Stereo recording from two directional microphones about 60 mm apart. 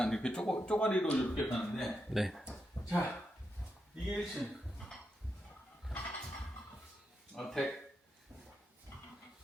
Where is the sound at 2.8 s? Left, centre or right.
Left.